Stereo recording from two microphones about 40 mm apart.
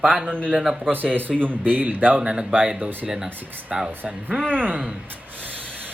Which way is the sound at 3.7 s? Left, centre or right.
Centre.